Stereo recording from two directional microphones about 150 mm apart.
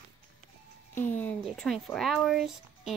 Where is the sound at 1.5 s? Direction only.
Centre (ahead or behind).